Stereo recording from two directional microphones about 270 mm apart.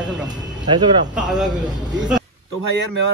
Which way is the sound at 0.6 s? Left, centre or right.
Centre.